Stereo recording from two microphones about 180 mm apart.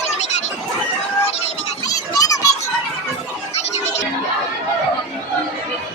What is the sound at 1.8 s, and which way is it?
Children playing, 20° left (ahead or behind).